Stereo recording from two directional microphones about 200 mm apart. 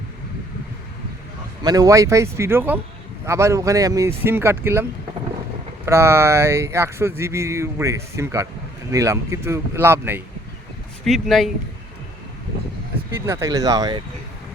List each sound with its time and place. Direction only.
1.6 s speech: 20° right (ahead or behind)
11.0 s speech: centre (ahead or behind)
13.2 s speech: 15° right (ahead or behind)